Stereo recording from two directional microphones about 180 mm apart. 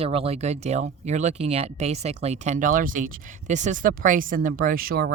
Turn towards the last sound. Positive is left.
turn(degrees=-55)  # may be behind; listen again after turning